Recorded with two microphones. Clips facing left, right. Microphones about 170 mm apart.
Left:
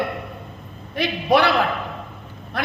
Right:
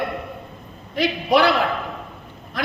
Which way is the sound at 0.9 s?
60° left (ahead or behind).